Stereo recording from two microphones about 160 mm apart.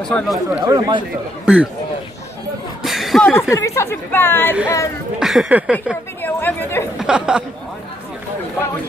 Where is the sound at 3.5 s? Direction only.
20° left (ahead or behind).